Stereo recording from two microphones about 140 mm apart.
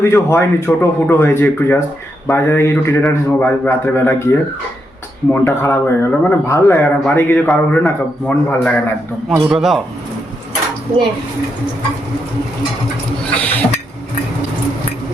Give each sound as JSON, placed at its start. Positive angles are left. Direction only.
{"t": 0.0, "sound": "a man's voice", "side_deg": 20}
{"t": 9.3, "sound": "a man's voice", "side_deg": -5}
{"t": 13.3, "sound": "a man's voice", "side_deg": 10}